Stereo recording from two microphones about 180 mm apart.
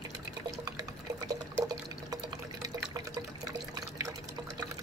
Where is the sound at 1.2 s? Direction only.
20° right (ahead or behind).